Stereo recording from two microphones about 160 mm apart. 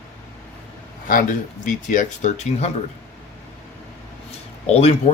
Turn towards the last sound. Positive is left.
turn(degrees=40)  # may be behind; listen again after turning